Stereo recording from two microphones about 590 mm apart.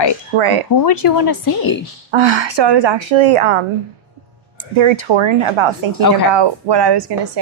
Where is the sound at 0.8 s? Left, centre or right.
Left.